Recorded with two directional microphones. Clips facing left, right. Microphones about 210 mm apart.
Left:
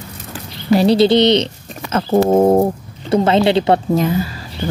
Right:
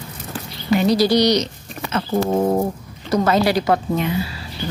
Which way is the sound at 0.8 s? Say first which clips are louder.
Left 4 dB; 30° left (ahead or behind).